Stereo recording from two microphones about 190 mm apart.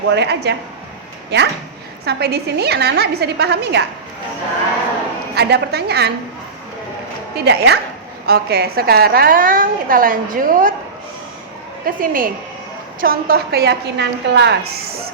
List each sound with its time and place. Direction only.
0.1 s a woman's voice: 60° right (ahead or behind)
5.3 s a woman's voice: 60° right (ahead or behind)
7.3 s a woman's voice: 60° right (ahead or behind); by 10.8 s 45° right (ahead or behind)
11.9 s a woman's voice: 45° right (ahead or behind)